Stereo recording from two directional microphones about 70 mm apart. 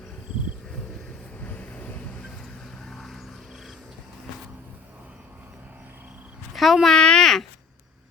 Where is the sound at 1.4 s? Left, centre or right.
Left.